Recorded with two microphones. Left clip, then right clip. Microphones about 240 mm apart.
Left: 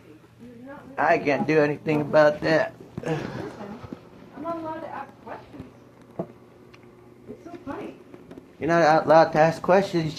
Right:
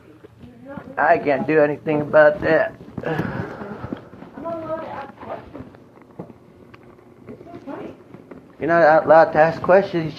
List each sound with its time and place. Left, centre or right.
0.9 s speech: left
8.6 s speech: left